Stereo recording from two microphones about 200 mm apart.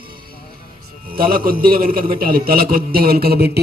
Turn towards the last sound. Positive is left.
turn(degrees=-50)  # may be behind; listen again after turning